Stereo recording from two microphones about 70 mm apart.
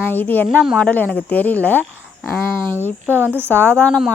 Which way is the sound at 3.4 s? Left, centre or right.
Left.